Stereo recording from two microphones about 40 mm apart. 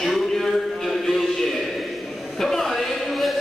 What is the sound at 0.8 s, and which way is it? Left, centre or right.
Music, centre.